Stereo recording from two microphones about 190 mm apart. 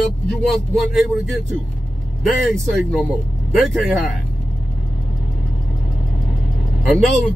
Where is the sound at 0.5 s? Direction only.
Centre (ahead or behind).